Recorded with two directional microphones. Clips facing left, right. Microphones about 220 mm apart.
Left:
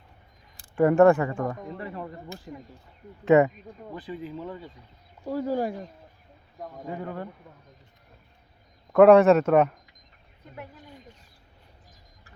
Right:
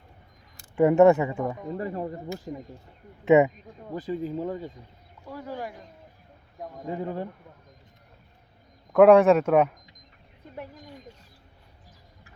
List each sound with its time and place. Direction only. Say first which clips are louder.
0.8 s speech: right 1 dB; 20° right (ahead or behind)
1.3 s speech: even; 5° right (ahead or behind)
1.8 s speech: right 9 dB; 40° right (ahead or behind)
2.5 s speech: right 5 dB; 25° right (ahead or behind)
3.9 s speech: right 6 dB; 40° right (ahead or behind)
5.2 s speech: left 9 dB; 35° left (ahead or behind)
6.9 s speech: right 4 dB; 25° right (ahead or behind)
8.9 s a man's voice: left 1 dB; centre (ahead or behind)